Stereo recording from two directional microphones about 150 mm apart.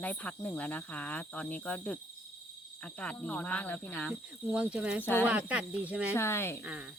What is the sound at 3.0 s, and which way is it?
Speech, 10° left (ahead or behind).